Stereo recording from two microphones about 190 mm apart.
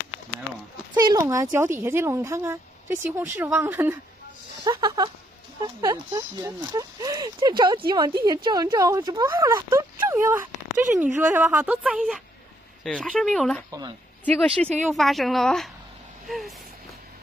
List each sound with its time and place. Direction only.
0.9 s speech: 20° right (ahead or behind)
4.6 s a woman's voice: 20° right (ahead or behind); by 13.7 s centre (ahead or behind)
13.7 s speech: 20° right (ahead or behind)
14.2 s a woman's voice: 5° left (ahead or behind)